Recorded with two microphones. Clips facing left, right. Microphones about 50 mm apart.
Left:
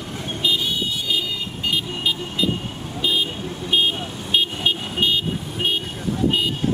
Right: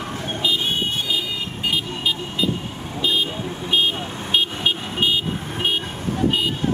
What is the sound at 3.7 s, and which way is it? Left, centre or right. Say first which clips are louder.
Vehicle: even; centre.